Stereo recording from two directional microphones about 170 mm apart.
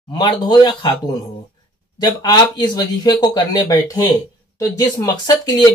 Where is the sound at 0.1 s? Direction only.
25° left (ahead or behind).